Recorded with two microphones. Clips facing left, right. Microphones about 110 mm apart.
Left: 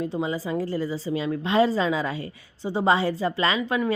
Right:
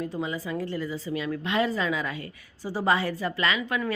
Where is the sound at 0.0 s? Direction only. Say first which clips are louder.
Left 4 dB; 30° left (ahead or behind).